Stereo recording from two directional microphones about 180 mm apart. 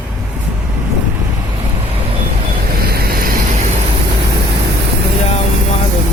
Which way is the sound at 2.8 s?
60° right (ahead or behind).